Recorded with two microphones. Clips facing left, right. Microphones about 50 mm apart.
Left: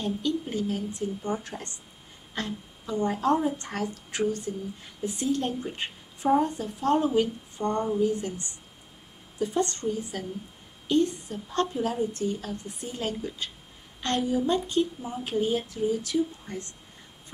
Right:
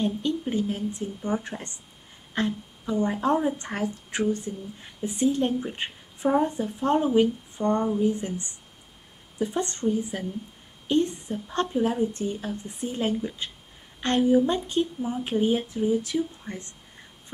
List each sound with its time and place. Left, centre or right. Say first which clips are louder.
0.0 s a woman's voice: right 2 dB; right